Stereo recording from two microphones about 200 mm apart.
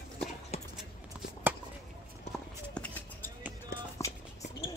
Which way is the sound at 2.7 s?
5° left (ahead or behind).